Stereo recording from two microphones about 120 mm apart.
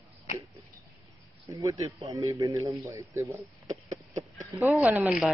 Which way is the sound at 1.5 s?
30° right (ahead or behind).